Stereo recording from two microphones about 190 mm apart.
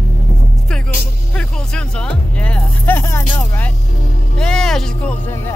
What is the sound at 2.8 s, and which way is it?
Music, 15° left (ahead or behind).